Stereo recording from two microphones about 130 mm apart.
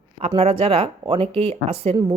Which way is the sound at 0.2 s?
45° right (ahead or behind).